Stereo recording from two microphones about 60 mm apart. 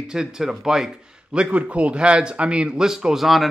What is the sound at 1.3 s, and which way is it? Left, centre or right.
A man's voice, right.